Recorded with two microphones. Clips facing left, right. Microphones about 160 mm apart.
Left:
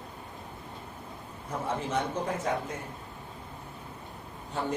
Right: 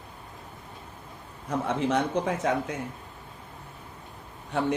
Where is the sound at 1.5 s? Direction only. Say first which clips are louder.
Right 6 dB; 75° right (ahead or behind).